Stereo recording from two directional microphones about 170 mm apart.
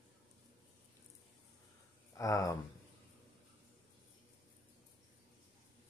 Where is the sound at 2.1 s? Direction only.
20° left (ahead or behind).